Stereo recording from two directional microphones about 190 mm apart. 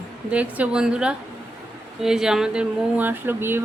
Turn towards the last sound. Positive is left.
turn(degrees=-10)  # may be behind; listen again after turning